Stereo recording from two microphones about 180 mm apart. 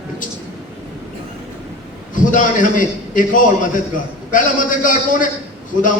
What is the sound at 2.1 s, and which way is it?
A man's voice, 45° left (ahead or behind).